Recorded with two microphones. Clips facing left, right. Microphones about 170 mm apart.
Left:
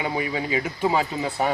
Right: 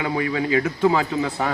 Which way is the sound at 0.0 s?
15° left (ahead or behind).